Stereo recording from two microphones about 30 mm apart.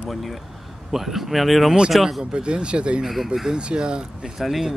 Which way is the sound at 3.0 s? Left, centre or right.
Centre.